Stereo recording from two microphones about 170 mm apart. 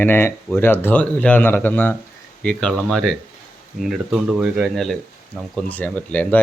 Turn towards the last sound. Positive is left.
turn(degrees=10)  # may be behind; listen again after turning